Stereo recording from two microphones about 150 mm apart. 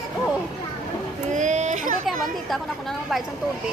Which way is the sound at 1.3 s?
55° right (ahead or behind).